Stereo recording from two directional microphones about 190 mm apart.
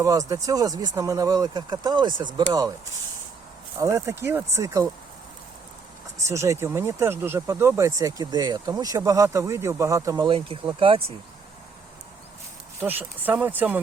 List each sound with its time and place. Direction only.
0.0 s speech: 20° right (ahead or behind)
3.8 s speech: 15° right (ahead or behind)
6.2 s speech: 15° right (ahead or behind)
12.8 s speech: 10° right (ahead or behind)